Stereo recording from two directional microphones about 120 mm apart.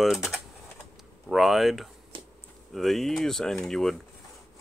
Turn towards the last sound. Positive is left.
turn(degrees=5)  # may be behind; listen again after turning